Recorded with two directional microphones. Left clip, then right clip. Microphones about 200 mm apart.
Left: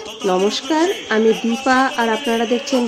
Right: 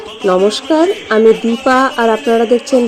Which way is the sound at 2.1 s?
5° left (ahead or behind).